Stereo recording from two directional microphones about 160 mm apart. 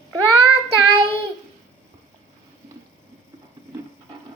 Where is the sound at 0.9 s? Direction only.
35° right (ahead or behind).